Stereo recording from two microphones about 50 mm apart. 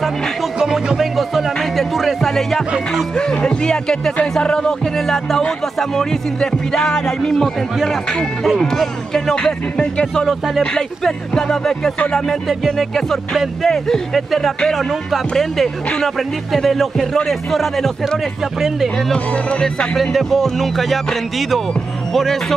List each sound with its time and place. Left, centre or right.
0.6 s music: centre
0.9 s music: centre
3.3 s speech: centre
6.4 s speech: centre
10.2 s music: centre
11.1 s speech: centre
12.4 s music: centre
19.1 s speech: left
20.0 s music: centre
22.1 s speech: centre